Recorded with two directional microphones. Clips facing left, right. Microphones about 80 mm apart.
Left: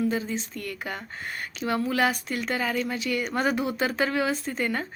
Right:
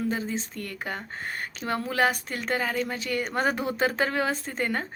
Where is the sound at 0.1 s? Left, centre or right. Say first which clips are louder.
Left 1 dB; right.